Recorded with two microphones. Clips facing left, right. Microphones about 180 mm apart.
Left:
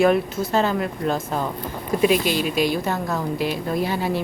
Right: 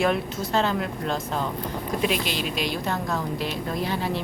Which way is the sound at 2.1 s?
45° left (ahead or behind).